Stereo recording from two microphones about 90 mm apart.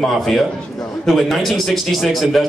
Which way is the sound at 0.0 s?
5° left (ahead or behind).